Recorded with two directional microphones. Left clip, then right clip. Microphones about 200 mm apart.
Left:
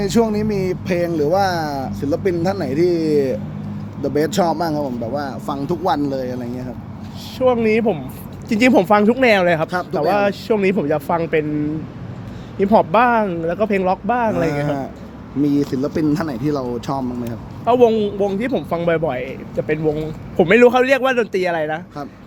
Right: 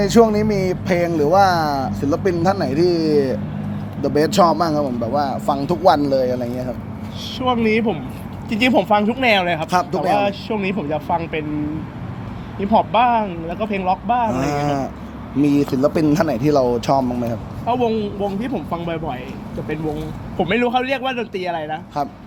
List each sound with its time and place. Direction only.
0.0 s speech: 10° left (ahead or behind)
7.3 s speech: 65° left (ahead or behind)
12.5 s speech: 60° left (ahead or behind)
14.4 s speech: centre (ahead or behind)
17.7 s speech: 60° left (ahead or behind)